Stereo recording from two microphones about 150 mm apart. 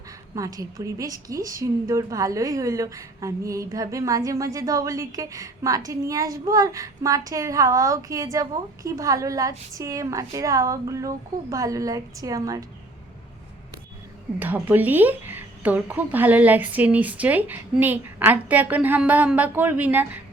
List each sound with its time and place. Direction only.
0.3 s a woman's voice: 20° right (ahead or behind)
14.3 s a woman's voice: 10° right (ahead or behind)